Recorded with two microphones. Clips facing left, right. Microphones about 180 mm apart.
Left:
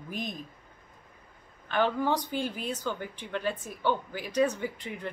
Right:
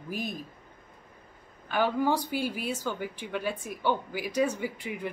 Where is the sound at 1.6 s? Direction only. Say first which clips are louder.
Right 1 dB; 10° right (ahead or behind).